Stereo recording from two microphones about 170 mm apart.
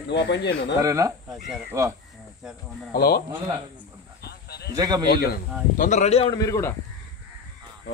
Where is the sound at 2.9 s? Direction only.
65° left (ahead or behind).